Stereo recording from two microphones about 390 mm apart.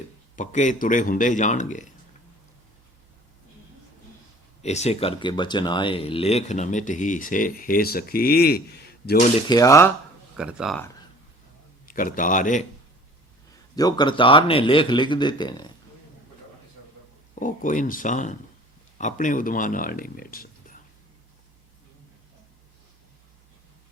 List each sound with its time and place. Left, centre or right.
0.3 s speech: centre
4.6 s speech: centre
9.5 s speech: centre
11.9 s speech: left
13.7 s speech: centre
17.4 s speech: centre